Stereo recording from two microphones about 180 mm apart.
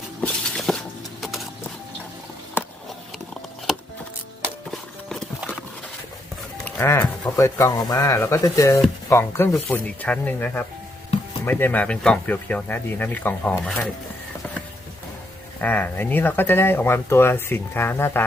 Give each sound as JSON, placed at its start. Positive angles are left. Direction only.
{"t": 0.2, "sound": "a sound", "side_deg": 5}
{"t": 1.2, "sound": "music", "side_deg": 0}
{"t": 3.7, "sound": "music", "side_deg": 0}
{"t": 4.7, "sound": "clip-clop", "side_deg": 5}
{"t": 6.7, "sound": "goat", "side_deg": 10}
{"t": 7.3, "sound": "speech", "side_deg": 15}
{"t": 15.6, "sound": "speech", "side_deg": 10}